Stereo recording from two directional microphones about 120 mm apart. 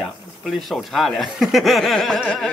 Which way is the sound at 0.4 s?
Centre (ahead or behind).